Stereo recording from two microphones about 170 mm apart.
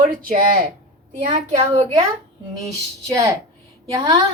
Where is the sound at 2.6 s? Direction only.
20° right (ahead or behind).